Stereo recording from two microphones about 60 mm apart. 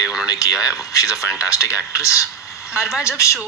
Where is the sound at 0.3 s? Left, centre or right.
Left.